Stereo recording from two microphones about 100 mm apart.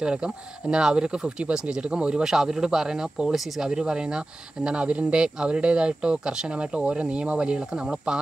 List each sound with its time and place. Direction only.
0.0 s speech: 10° right (ahead or behind)